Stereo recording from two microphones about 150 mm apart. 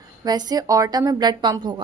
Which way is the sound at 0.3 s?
25° right (ahead or behind).